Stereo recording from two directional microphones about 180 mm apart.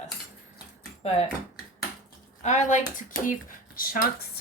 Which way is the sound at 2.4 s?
40° left (ahead or behind).